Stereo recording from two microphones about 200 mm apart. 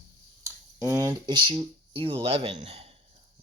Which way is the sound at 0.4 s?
15° right (ahead or behind).